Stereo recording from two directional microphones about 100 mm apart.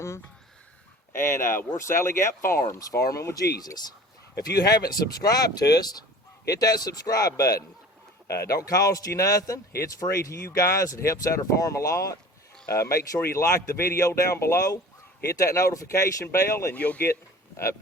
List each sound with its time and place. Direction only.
1.1 s a man's voice: 25° left (ahead or behind)
16.7 s speech: 15° left (ahead or behind)